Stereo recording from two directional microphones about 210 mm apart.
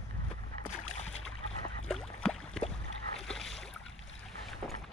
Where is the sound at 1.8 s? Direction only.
5° left (ahead or behind).